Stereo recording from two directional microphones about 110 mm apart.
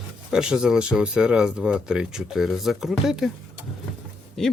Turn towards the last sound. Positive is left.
turn(degrees=5)  # may be behind; listen again after turning